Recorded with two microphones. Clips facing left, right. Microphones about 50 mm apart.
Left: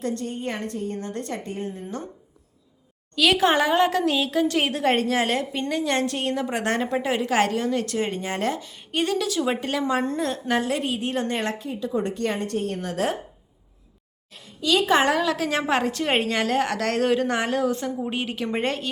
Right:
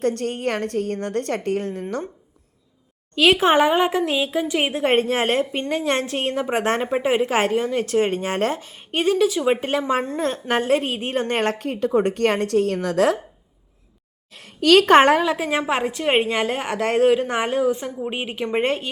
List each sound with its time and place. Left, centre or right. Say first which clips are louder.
0.0 s a woman's voice: right 6 dB; right
1.8 s a woman's voice: right 6 dB; right
3.2 s a woman's voice: right 4 dB; right
9.2 s a woman's voice: right 5 dB; centre; by 11.5 s right
11.5 s a woman's voice: right 6 dB; right
11.9 s a woman's voice: right 6 dB; right
12.2 s a woman's voice: right 7 dB; right
14.4 s a woman's voice: right 7 dB; right
14.9 s a woman's voice: right 6 dB; right
15.2 s a woman's voice: right 2 dB; right
15.4 s a woman's voice: right 1 dB; centre